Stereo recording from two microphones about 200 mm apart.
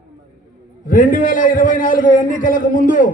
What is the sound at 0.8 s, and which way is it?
A man's voice, 40° left (ahead or behind).